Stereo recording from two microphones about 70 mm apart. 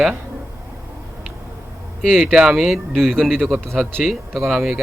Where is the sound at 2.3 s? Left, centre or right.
Centre.